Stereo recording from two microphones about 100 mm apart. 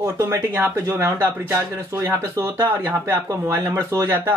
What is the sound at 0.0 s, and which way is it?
Speech, 25° right (ahead or behind).